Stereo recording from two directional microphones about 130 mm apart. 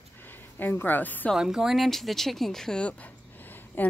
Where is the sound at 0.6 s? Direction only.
15° left (ahead or behind).